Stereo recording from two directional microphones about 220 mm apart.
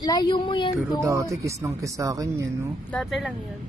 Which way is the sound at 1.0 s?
15° right (ahead or behind).